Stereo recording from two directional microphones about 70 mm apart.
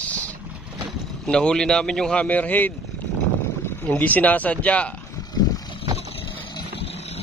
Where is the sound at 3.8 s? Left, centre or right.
Left.